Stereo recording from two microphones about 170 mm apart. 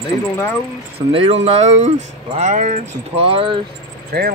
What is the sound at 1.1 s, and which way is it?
Speech, 35° right (ahead or behind).